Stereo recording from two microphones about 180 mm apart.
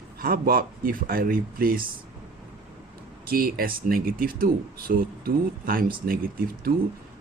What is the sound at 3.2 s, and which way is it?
Speech, 55° right (ahead or behind).